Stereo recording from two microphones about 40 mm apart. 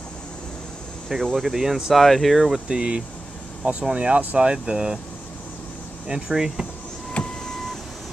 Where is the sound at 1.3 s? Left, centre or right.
Centre.